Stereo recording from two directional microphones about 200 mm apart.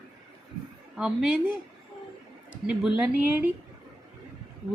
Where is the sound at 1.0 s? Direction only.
5° right (ahead or behind).